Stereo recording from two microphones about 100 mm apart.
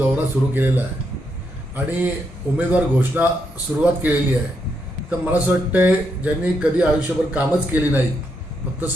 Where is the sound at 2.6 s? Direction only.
15° right (ahead or behind).